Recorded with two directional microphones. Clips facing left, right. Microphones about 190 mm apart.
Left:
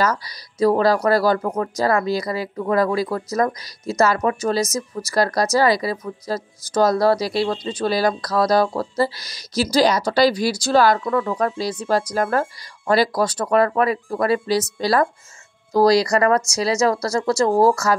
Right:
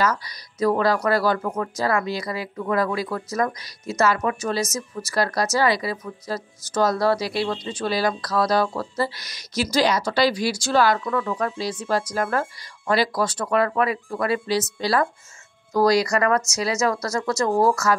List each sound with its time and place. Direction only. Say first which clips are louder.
0.0 s speech: left 2 dB; 35° left (ahead or behind)